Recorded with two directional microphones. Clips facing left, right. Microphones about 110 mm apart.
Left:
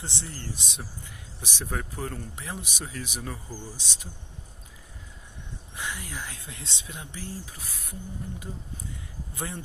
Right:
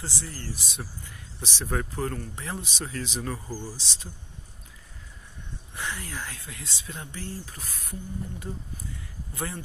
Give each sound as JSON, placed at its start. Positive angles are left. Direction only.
{"t": 0.0, "sound": "speech", "side_deg": 25}
{"t": 3.4, "sound": "speech", "side_deg": -10}
{"t": 3.7, "sound": "speech", "side_deg": 15}
{"t": 5.8, "sound": "speech", "side_deg": 15}